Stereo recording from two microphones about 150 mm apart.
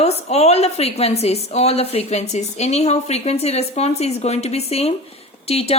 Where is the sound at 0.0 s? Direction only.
45° left (ahead or behind).